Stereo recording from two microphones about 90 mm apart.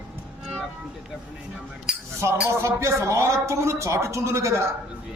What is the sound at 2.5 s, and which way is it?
A man's voice, 30° right (ahead or behind).